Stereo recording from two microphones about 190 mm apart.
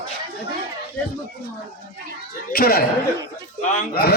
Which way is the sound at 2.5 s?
50° left (ahead or behind).